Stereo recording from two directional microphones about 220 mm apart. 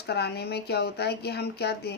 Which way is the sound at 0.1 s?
45° left (ahead or behind).